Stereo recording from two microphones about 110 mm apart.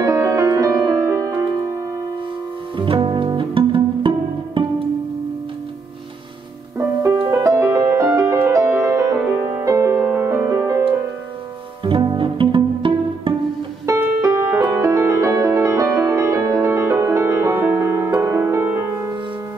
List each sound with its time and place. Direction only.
0.0 s music: 30° right (ahead or behind)
2.8 s music: 50° right (ahead or behind)
7.2 s music: 25° right (ahead or behind)
11.8 s pizzicato: 45° right (ahead or behind)
13.8 s music: 25° right (ahead or behind)